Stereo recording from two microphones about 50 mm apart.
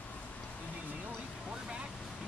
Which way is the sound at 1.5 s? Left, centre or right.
Centre.